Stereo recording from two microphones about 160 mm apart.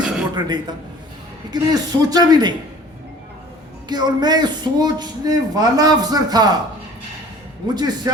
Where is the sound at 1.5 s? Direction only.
25° right (ahead or behind).